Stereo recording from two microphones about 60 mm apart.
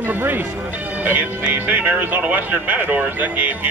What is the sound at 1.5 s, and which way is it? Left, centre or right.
Speech, right.